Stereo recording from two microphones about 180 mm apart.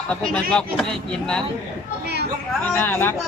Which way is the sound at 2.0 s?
65° right (ahead or behind).